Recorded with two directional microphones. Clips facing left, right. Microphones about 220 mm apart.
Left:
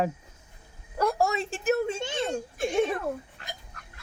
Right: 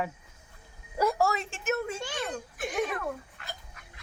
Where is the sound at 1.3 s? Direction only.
35° left (ahead or behind).